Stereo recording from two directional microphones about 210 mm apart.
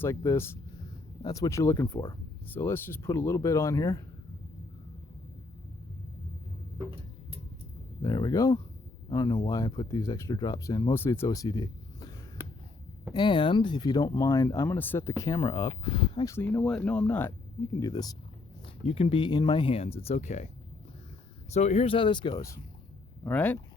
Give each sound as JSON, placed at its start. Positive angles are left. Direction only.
{"t": 0.0, "sound": "speech", "side_deg": 15}
{"t": 8.0, "sound": "speech", "side_deg": 15}
{"t": 13.1, "sound": "speech", "side_deg": 20}
{"t": 18.9, "sound": "speech", "side_deg": 25}
{"t": 21.5, "sound": "speech", "side_deg": 30}